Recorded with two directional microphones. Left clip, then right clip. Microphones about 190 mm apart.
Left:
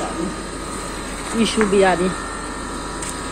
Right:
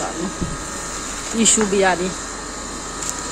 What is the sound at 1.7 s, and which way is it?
Speech, 5° right (ahead or behind).